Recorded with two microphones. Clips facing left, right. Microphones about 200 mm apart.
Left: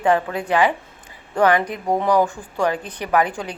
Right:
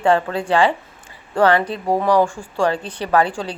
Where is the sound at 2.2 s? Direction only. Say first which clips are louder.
Right 2 dB; 10° right (ahead or behind).